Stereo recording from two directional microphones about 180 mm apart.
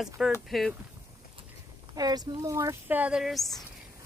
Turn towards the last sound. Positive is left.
turn(degrees=0)  # may be behind; listen again after turning